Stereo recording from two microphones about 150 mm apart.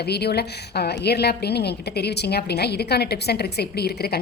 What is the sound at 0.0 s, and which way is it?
A woman's voice, 90° left.